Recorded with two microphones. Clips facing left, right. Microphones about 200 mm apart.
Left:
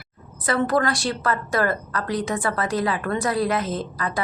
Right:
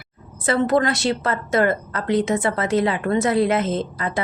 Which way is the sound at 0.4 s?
25° right (ahead or behind).